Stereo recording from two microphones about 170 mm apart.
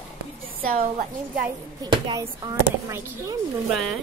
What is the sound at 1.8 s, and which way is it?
Speech, 25° right (ahead or behind).